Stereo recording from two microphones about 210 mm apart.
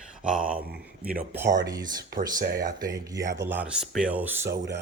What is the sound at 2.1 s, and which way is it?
Speech, 45° right (ahead or behind).